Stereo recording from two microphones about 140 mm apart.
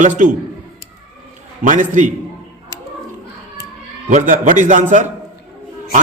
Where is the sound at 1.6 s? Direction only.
65° right (ahead or behind).